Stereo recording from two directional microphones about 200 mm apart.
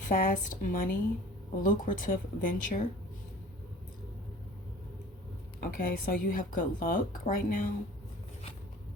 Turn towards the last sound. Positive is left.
turn(degrees=45)  # may be behind; listen again after turning